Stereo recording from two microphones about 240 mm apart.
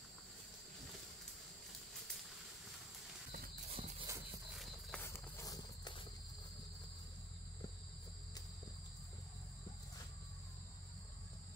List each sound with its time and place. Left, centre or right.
3.7 s horse: right
4.6 s clip-clop: centre
5.0 s walk: centre